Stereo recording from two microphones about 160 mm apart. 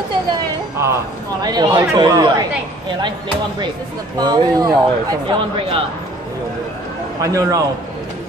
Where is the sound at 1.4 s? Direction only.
25° right (ahead or behind).